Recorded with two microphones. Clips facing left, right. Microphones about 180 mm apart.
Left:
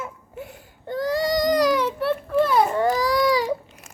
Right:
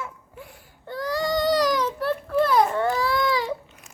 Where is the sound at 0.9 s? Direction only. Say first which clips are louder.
Left 3 dB; 20° left (ahead or behind).